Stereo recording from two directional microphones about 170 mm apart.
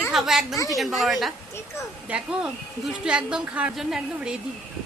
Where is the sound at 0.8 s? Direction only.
Centre (ahead or behind).